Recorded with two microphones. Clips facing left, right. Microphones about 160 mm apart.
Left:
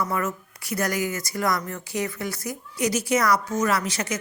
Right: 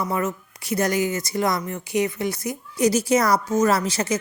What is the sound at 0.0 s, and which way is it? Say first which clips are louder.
A woman's voice: right 2 dB; 20° right (ahead or behind).